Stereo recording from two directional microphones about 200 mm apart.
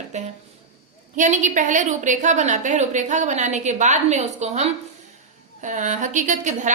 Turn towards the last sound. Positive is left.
turn(degrees=-40)  # may be behind; listen again after turning